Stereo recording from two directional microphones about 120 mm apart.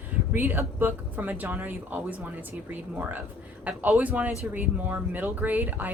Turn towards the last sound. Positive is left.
turn(degrees=-15)  # may be behind; listen again after turning